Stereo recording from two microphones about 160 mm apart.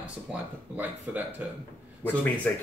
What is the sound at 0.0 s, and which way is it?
Speech, 10° right (ahead or behind).